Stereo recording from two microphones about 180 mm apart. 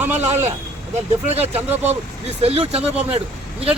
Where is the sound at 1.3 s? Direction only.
35° right (ahead or behind).